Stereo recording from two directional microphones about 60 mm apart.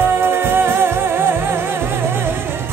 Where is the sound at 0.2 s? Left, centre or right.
Right.